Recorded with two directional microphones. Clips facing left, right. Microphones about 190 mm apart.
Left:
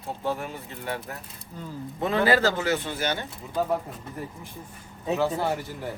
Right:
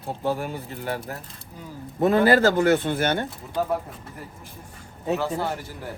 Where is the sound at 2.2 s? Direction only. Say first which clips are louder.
Right 3 dB; 50° right (ahead or behind).